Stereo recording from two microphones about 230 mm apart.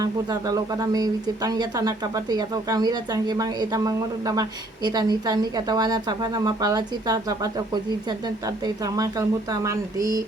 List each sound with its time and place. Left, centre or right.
0.0 s speech: centre